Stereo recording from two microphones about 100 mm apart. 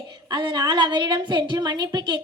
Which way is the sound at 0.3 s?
45° right (ahead or behind).